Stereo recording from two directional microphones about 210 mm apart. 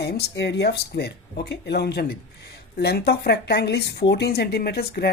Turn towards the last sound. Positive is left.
turn(degrees=50)  # may be behind; listen again after turning